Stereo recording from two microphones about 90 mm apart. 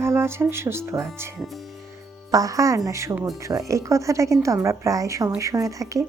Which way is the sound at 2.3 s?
40° right (ahead or behind).